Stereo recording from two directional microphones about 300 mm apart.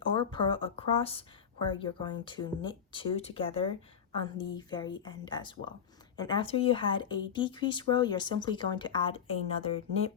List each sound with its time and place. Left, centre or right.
0.1 s a woman's voice: centre